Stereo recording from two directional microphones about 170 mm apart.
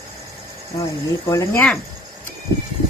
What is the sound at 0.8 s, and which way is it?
Speech, 20° left (ahead or behind).